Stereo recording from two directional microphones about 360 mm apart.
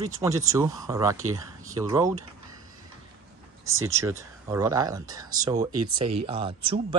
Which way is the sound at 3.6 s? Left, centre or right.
Right.